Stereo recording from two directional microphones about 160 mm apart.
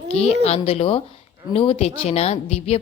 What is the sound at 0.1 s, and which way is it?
A woman's voice, 40° left (ahead or behind).